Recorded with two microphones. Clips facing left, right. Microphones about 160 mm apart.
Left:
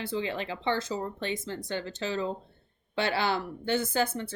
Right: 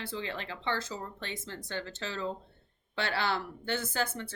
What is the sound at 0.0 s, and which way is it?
Speech, 15° left (ahead or behind).